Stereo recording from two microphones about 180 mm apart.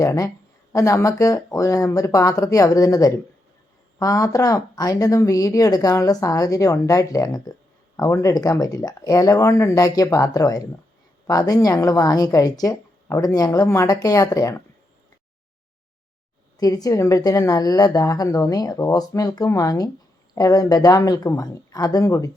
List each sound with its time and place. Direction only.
0.0 s speech: 20° left (ahead or behind)
16.6 s speech: 20° left (ahead or behind)